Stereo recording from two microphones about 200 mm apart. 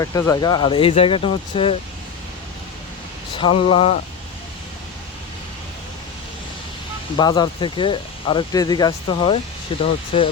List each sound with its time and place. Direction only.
0.0 s speech: 15° left (ahead or behind)
3.3 s speech: 25° left (ahead or behind)
7.2 s speech: 20° left (ahead or behind)